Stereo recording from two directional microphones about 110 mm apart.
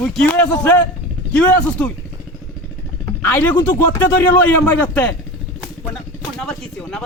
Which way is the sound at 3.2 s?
20° left (ahead or behind).